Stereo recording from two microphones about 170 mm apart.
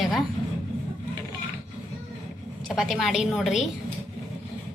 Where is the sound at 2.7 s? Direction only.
Centre (ahead or behind).